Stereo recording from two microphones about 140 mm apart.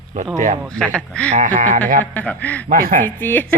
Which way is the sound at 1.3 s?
70° right (ahead or behind).